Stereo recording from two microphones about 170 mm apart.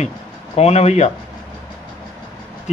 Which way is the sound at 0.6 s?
40° left (ahead or behind).